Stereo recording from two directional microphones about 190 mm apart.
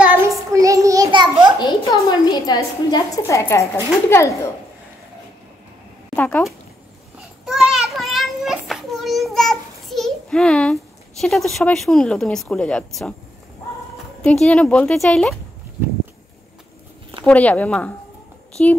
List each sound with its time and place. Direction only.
0.0 s child singing: 10° right (ahead or behind)
1.6 s a sound: 20° left (ahead or behind)
4.1 s speech: 15° left (ahead or behind)
6.1 s speech: 5° left (ahead or behind)
7.4 s child singing: centre (ahead or behind)
13.9 s speech: centre (ahead or behind)
17.2 s speech: 5° left (ahead or behind)